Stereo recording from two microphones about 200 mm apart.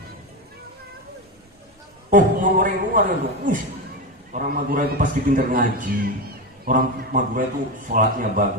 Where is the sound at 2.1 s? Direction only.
40° right (ahead or behind).